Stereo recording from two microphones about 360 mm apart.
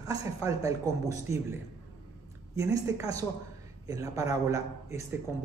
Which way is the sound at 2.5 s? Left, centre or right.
Centre.